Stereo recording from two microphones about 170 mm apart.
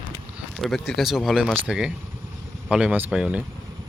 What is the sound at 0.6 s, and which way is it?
Speech, centre (ahead or behind).